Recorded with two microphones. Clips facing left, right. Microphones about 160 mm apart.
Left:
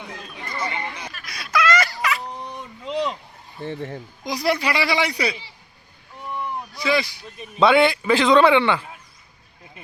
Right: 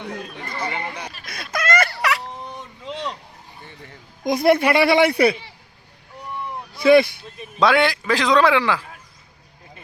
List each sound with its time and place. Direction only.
0.4 s speech: 35° right (ahead or behind)
1.2 s a sound: 50° right (ahead or behind); by 2.2 s 70° right (ahead or behind)
2.4 s a sound: centre (ahead or behind)
4.2 s a woman's voice: 55° right (ahead or behind)
6.7 s a woman's voice: 55° right (ahead or behind)
7.3 s a man's voice: centre (ahead or behind)